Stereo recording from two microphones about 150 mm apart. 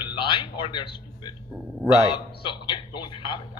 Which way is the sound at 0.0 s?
35° left (ahead or behind).